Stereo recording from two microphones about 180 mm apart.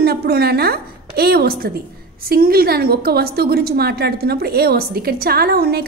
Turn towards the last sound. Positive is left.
turn(degrees=-55)  # may be behind; listen again after turning